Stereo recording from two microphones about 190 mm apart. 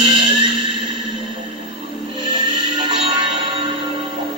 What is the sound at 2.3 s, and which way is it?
Music, 25° right (ahead or behind).